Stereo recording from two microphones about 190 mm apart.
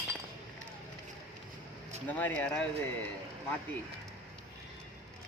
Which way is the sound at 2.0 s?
10° left (ahead or behind).